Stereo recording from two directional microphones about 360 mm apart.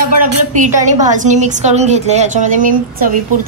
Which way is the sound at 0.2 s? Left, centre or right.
Right.